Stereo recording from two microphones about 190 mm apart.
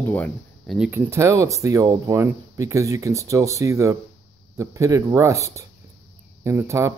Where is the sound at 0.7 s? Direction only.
10° right (ahead or behind).